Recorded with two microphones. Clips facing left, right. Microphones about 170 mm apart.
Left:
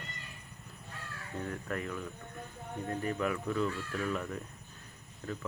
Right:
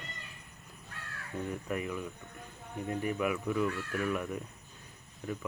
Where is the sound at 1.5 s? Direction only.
15° right (ahead or behind).